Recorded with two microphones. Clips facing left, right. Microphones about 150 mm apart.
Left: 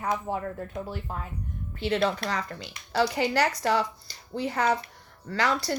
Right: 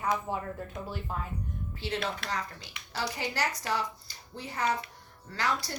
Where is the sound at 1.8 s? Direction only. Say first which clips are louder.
Left 9 dB; 70° left (ahead or behind).